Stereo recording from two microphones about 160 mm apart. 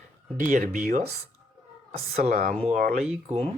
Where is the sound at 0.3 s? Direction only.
60° right (ahead or behind).